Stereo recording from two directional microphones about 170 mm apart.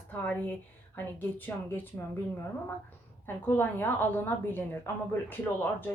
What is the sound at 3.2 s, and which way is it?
Speech, 10° left (ahead or behind).